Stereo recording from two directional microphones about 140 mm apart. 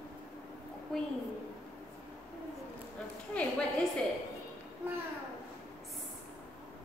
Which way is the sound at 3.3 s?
10° left (ahead or behind).